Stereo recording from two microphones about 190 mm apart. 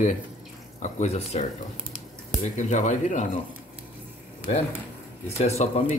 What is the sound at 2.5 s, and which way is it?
Speech, 40° left (ahead or behind).